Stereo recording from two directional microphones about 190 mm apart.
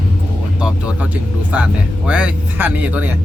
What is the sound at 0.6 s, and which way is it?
Music, 5° right (ahead or behind).